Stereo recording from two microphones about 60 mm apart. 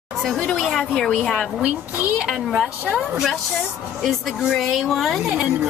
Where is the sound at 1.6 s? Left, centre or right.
Centre.